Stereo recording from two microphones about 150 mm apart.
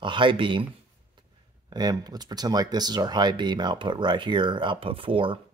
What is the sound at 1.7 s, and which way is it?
Speech, 25° right (ahead or behind).